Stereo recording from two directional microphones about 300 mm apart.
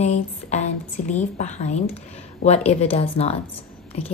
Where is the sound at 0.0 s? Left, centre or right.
Left.